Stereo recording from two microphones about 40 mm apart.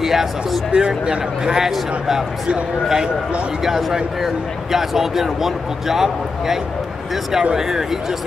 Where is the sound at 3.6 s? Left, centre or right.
Centre.